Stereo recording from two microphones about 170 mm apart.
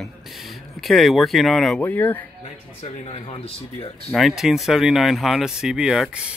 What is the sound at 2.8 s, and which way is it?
Speech, 35° left (ahead or behind).